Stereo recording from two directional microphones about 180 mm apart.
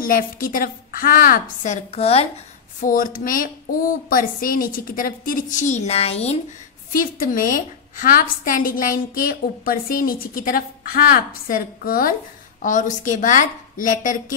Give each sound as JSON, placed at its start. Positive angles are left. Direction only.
{"t": 0.0, "sound": "a woman's voice", "side_deg": 50}
{"t": 2.8, "sound": "a woman's voice", "side_deg": 50}
{"t": 6.9, "sound": "a woman's voice", "side_deg": 50}